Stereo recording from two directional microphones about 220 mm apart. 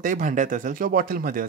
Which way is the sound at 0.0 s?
35° right (ahead or behind).